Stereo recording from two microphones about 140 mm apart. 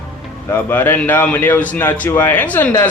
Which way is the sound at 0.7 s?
15° left (ahead or behind).